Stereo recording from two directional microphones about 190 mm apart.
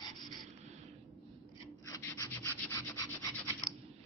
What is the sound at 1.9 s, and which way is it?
Rub, 15° left (ahead or behind).